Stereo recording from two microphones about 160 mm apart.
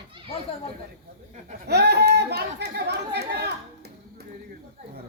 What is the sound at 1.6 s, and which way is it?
Chatter, 90° right.